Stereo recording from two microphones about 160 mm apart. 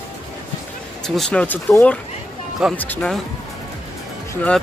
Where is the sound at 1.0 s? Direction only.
5° left (ahead or behind).